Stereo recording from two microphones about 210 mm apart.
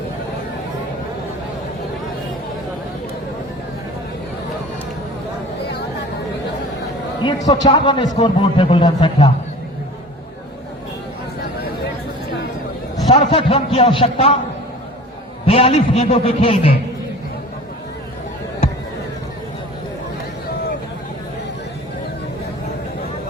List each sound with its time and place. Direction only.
7.2 s a man's voice: 20° left (ahead or behind)
13.1 s a man's voice: 25° left (ahead or behind)
15.4 s a man's voice: 30° left (ahead or behind)